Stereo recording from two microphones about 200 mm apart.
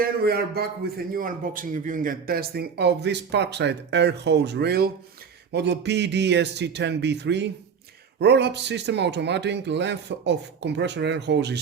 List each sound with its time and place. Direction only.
0.0 s a man's voice: 50° right (ahead or behind)